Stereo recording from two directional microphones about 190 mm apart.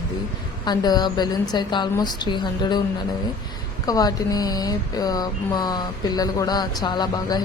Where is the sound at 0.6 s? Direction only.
20° left (ahead or behind).